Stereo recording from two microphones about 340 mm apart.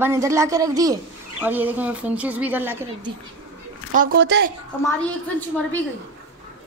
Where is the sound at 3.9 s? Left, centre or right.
Right.